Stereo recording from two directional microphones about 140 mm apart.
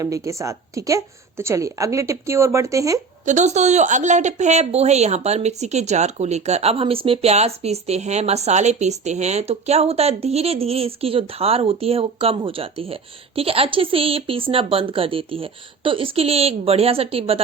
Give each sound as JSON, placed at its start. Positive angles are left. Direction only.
{"t": 0.0, "sound": "a woman's voice", "side_deg": -20}
{"t": 3.2, "sound": "a woman's voice", "side_deg": -55}